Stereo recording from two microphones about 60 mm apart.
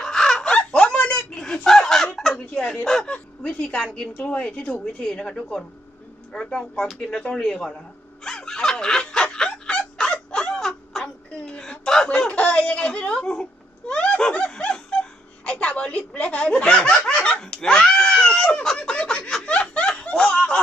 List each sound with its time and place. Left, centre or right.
0.0 s giggle: centre
0.7 s a sound: centre
1.5 s a sound: centre
2.5 s fowl: centre
2.8 s speech: centre
3.1 s a woman's voice: centre
8.2 s snicker: centre
11.0 s a sound: centre
15.4 s speech: centre
17.2 s snicker: left
17.4 s a sound: centre
19.5 s snicker: centre
20.1 s fowl: centre